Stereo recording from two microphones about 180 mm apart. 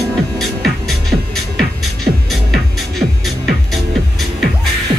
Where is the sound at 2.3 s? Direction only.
Centre (ahead or behind).